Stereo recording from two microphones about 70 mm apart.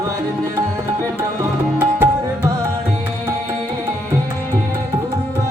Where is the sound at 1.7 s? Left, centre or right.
Right.